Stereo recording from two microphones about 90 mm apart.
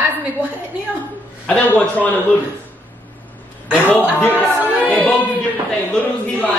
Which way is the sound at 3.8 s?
20° left (ahead or behind).